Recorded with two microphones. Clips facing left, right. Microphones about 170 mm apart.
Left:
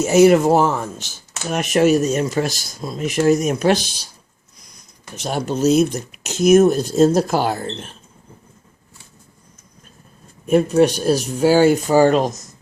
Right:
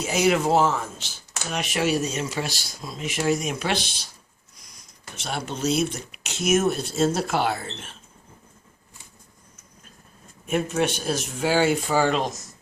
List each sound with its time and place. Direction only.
0.0 s speech: 45° left (ahead or behind)
5.1 s speech: 40° left (ahead or behind)
10.4 s speech: 40° left (ahead or behind)